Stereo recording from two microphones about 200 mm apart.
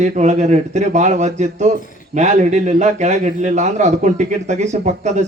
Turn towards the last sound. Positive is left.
turn(degrees=-35)  # may be behind; listen again after turning